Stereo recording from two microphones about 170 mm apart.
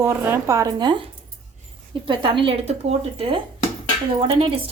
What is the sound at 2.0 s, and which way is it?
Speech, 30° right (ahead or behind).